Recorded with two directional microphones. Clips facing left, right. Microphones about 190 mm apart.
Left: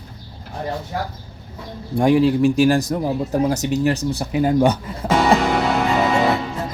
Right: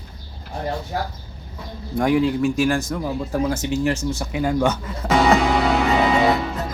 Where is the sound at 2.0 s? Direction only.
30° left (ahead or behind).